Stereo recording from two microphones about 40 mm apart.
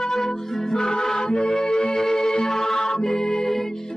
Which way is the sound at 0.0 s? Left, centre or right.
Centre.